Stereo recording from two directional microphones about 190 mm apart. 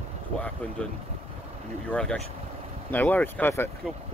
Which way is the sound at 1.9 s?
5° left (ahead or behind).